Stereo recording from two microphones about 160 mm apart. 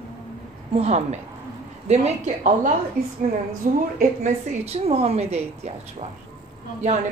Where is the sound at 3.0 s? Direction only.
65° right (ahead or behind).